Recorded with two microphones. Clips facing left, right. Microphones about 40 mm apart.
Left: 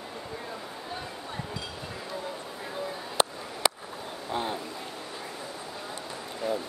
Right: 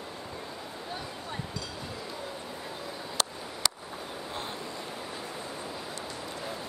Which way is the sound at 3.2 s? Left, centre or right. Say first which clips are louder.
Left 6 dB; left.